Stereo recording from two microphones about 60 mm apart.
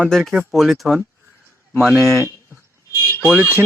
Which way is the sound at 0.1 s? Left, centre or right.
Centre.